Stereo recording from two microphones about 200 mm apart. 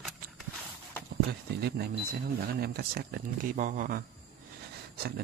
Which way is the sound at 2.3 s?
50° right (ahead or behind).